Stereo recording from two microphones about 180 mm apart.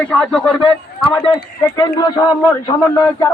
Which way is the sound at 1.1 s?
30° left (ahead or behind).